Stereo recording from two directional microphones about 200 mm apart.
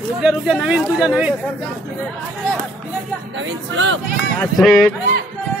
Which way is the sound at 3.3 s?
70° right (ahead or behind).